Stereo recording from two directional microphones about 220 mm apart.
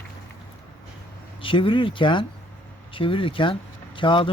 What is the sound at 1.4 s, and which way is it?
Speech, 25° left (ahead or behind).